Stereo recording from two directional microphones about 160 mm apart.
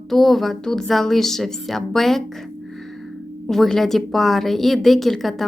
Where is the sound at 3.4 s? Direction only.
Centre (ahead or behind).